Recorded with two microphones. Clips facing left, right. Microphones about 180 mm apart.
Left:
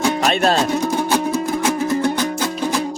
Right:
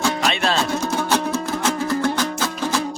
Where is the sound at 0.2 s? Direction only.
45° left (ahead or behind).